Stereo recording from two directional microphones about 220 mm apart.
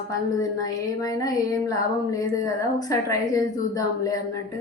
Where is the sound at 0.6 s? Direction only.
15° left (ahead or behind).